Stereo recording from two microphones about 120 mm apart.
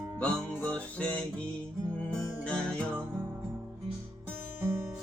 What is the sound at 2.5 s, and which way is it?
Music, 10° left (ahead or behind).